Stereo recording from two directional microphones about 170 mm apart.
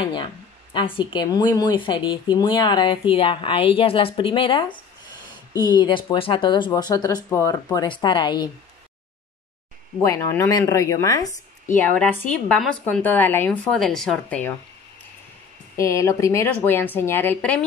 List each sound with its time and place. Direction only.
0.0 s a sound: 30° left (ahead or behind)
0.7 s speech: 30° left (ahead or behind)
10.0 s a woman's voice: 15° left (ahead or behind)
12.4 s a woman's voice: 5° left (ahead or behind)
15.8 s a woman's voice: 15° left (ahead or behind)